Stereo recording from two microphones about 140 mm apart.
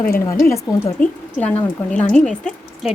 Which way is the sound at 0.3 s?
20° left (ahead or behind).